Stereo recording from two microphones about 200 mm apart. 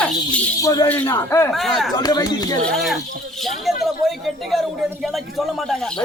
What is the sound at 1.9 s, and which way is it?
Speech, 20° left (ahead or behind).